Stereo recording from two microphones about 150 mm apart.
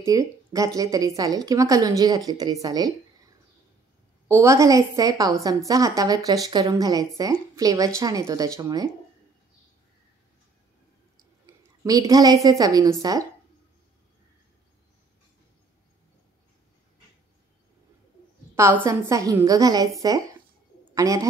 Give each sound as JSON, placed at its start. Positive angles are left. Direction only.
{"t": 0.0, "sound": "a woman's voice", "side_deg": -20}
{"t": 4.3, "sound": "a woman's voice", "side_deg": -20}
{"t": 11.4, "sound": "a woman's voice", "side_deg": -25}
{"t": 18.5, "sound": "a sound", "side_deg": -15}
{"t": 18.9, "sound": "a woman's voice", "side_deg": -20}